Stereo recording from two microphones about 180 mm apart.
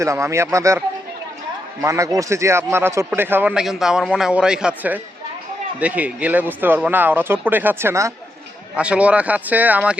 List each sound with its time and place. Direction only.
0.0 s a man's voice: 15° right (ahead or behind)
1.8 s a man's voice: 15° right (ahead or behind)